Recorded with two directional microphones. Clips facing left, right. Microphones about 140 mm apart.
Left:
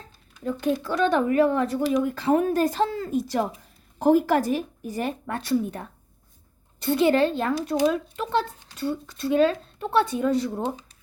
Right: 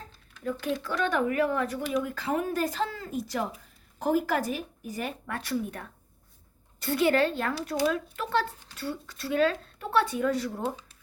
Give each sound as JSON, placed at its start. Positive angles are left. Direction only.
{"t": 0.6, "sound": "a woman's voice", "side_deg": 25}